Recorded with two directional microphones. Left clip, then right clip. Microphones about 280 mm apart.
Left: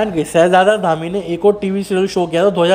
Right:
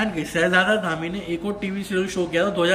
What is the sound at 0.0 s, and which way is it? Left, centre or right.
Speech, centre.